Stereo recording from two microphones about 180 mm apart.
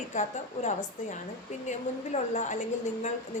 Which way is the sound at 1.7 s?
40° left (ahead or behind).